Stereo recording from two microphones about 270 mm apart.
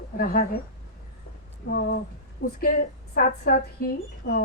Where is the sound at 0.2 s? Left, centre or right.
Left.